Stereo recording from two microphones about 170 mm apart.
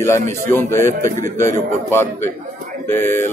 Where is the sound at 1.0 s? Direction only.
45° right (ahead or behind).